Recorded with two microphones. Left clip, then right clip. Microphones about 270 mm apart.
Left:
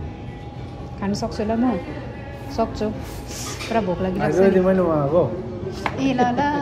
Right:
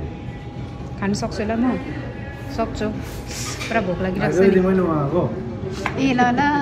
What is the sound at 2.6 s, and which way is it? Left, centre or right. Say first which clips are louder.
Speech: left 1 dB; centre.